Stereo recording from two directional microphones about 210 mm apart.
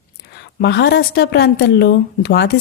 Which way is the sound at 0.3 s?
50° left (ahead or behind).